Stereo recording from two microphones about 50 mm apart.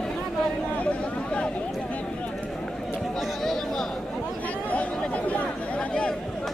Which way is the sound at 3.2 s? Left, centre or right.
Centre.